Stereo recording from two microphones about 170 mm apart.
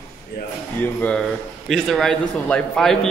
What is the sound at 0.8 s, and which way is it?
A man's voice, 10° left (ahead or behind).